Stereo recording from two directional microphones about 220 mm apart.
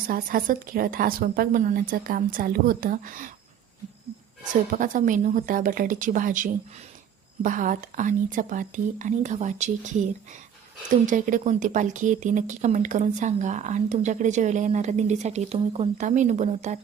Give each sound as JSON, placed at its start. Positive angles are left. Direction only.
{"t": 0.1, "sound": "speech", "side_deg": -40}
{"t": 4.7, "sound": "speech", "side_deg": -35}